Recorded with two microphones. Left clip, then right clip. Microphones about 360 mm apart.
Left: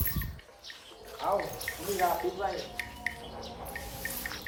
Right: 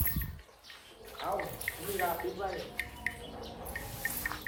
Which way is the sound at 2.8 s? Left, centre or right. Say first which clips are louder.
Even; centre.